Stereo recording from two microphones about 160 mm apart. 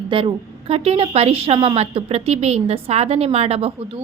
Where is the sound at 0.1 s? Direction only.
35° right (ahead or behind).